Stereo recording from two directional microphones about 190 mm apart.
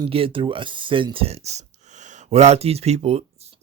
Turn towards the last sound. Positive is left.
turn(degrees=-35)  # may be behind; listen again after turning